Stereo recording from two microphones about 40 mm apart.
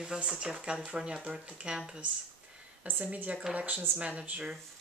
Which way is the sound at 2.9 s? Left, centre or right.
Right.